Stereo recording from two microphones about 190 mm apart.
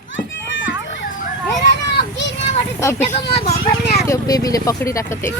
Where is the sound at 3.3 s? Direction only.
35° left (ahead or behind).